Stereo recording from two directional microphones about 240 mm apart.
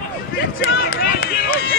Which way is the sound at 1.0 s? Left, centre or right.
Left.